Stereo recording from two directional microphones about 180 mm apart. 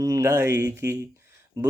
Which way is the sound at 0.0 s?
15° right (ahead or behind).